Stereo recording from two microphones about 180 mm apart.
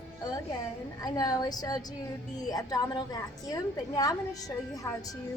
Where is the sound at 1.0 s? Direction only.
20° left (ahead or behind).